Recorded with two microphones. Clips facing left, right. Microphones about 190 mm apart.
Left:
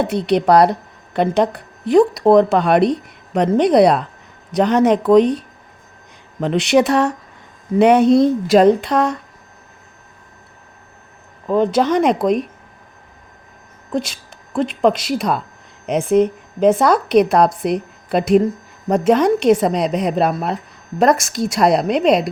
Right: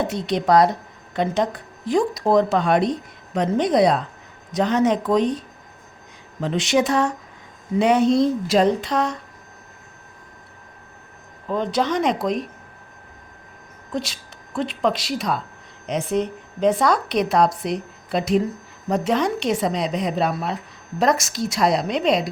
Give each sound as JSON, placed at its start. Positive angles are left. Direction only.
{"t": 0.1, "sound": "a woman's voice", "side_deg": 65}
{"t": 11.4, "sound": "a woman's voice", "side_deg": 50}
{"t": 13.9, "sound": "a woman's voice", "side_deg": 50}